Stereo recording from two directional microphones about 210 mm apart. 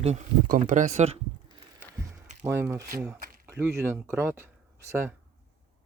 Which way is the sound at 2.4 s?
15° right (ahead or behind).